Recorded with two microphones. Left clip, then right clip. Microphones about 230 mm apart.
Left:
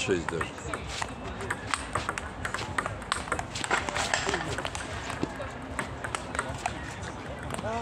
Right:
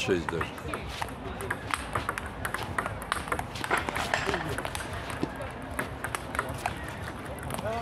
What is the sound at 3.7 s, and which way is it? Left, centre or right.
Run, left.